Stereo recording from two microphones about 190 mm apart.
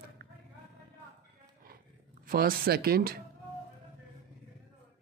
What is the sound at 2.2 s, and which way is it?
Speech, 50° right (ahead or behind).